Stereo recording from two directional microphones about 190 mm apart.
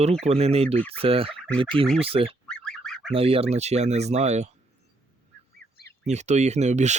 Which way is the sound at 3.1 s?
30° right (ahead or behind).